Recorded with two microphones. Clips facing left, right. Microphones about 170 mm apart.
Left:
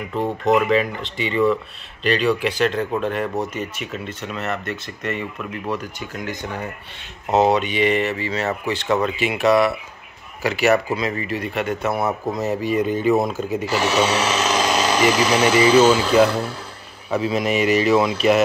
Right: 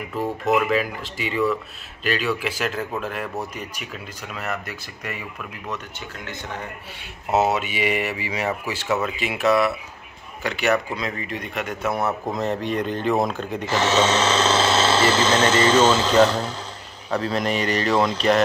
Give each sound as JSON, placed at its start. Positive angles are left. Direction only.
{"t": 0.1, "sound": "speech", "side_deg": 25}
{"t": 0.7, "sound": "speech", "side_deg": -5}
{"t": 7.2, "sound": "a man's voice", "side_deg": -5}